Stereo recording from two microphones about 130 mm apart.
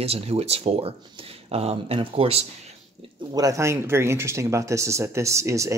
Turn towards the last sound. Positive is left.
turn(degrees=-25)  # may be behind; listen again after turning